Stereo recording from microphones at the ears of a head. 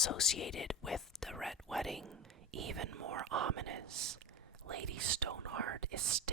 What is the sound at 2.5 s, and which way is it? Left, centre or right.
Speech, right.